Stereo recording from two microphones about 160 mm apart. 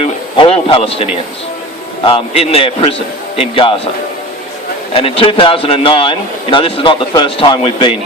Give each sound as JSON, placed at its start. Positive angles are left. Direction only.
{"t": 0.0, "sound": "radio", "side_deg": 35}
{"t": 2.0, "sound": "a man's voice", "side_deg": 40}
{"t": 4.9, "sound": "a man's voice", "side_deg": 35}